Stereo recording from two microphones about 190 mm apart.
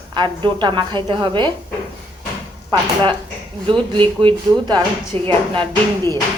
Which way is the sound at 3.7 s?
25° right (ahead or behind).